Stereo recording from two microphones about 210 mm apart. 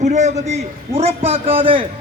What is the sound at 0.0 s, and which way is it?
A man's voice, 35° right (ahead or behind).